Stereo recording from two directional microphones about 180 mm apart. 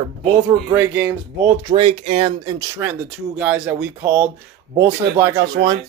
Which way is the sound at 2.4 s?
20° right (ahead or behind).